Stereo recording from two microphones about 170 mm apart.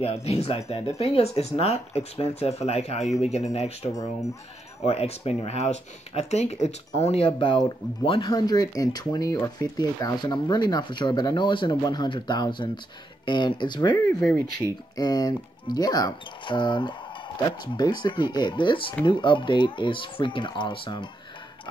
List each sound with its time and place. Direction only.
0.0 s speech: 35° left (ahead or behind)